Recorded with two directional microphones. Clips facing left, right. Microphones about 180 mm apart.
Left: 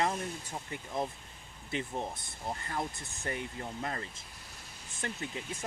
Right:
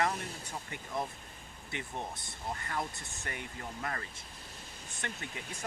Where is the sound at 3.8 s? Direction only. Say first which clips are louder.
Even; 25° left (ahead or behind).